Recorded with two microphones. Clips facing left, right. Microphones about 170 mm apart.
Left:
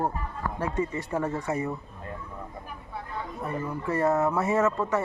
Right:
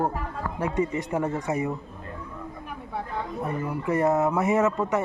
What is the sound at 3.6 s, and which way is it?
A man's voice, 15° right (ahead or behind).